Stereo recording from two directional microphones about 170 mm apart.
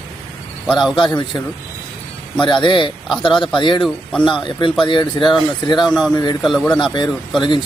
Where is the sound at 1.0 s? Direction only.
25° left (ahead or behind).